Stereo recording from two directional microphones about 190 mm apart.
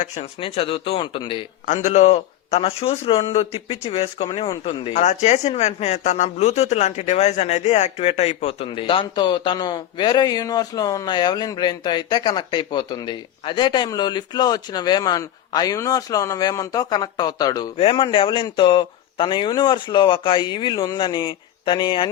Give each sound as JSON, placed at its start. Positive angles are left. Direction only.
{"t": 0.0, "sound": "speech", "side_deg": 30}
{"t": 1.6, "sound": "speech", "side_deg": 40}